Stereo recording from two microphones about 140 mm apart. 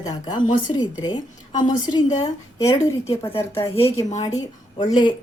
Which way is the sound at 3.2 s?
20° left (ahead or behind).